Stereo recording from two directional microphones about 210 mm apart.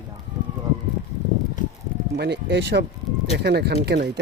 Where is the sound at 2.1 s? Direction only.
50° right (ahead or behind).